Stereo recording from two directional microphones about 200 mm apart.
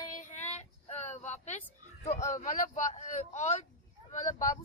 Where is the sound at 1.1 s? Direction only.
35° left (ahead or behind).